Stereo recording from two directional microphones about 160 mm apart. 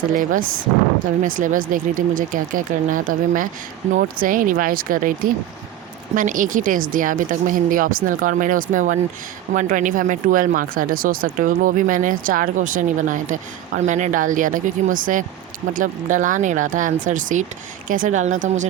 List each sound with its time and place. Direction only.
0.1 s speech: 55° right (ahead or behind)